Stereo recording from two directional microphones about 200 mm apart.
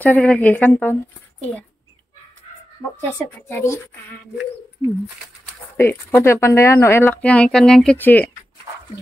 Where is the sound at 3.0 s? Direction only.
10° left (ahead or behind).